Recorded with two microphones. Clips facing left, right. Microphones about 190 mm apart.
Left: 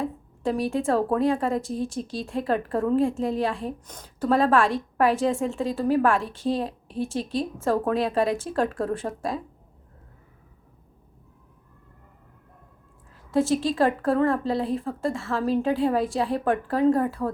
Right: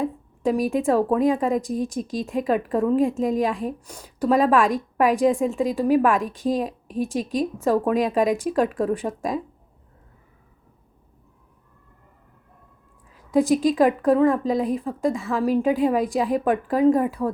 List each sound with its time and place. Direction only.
0.0 s a woman's voice: 15° right (ahead or behind)
13.3 s a woman's voice: 15° right (ahead or behind)